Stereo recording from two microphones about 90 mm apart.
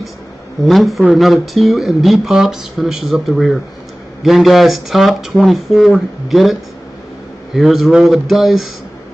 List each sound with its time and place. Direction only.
0.7 s speech: centre (ahead or behind)